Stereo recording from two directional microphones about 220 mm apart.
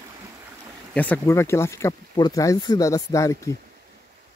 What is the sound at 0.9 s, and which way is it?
Speech, 5° left (ahead or behind).